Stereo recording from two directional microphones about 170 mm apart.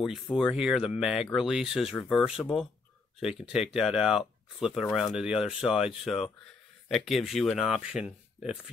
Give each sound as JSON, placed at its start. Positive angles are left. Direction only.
{"t": 0.0, "sound": "speech", "side_deg": 0}